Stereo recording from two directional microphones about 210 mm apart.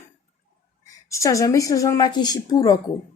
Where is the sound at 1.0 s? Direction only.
15° left (ahead or behind).